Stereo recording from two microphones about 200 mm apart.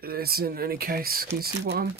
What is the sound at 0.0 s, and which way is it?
Speech, 50° right (ahead or behind).